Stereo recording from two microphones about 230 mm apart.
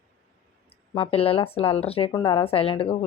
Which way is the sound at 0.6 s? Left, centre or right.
Left.